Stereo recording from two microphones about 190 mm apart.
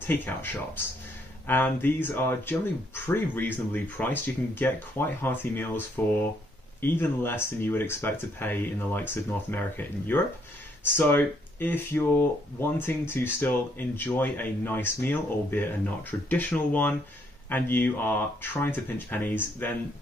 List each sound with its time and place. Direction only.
0.0 s speech: 10° left (ahead or behind)